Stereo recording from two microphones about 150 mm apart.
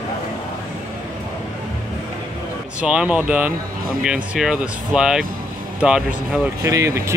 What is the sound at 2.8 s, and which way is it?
Speech, 5° right (ahead or behind).